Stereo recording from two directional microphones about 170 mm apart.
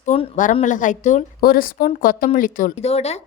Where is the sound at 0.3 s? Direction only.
45° left (ahead or behind).